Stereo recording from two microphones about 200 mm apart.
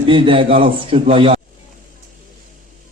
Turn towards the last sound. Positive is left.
turn(degrees=-25)  # may be behind; listen again after turning